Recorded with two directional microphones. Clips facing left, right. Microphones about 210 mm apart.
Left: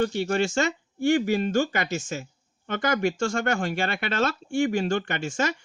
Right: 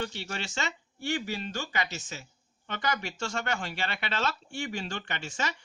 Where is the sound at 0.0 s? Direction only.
50° left (ahead or behind).